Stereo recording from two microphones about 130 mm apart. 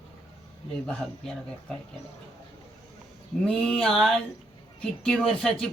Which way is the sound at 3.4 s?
5° left (ahead or behind).